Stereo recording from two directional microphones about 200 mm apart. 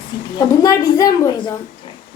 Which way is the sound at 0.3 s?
15° left (ahead or behind).